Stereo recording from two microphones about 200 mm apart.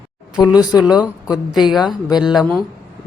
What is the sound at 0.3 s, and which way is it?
Speech, 20° left (ahead or behind).